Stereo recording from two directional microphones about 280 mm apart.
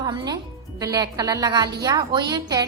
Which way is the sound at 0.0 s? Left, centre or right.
Centre.